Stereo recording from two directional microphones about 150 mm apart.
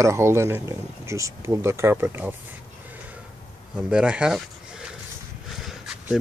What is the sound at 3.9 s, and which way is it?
Speech, 5° right (ahead or behind).